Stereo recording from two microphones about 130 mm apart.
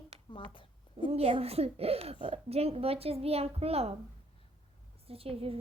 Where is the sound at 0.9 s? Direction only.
50° right (ahead or behind).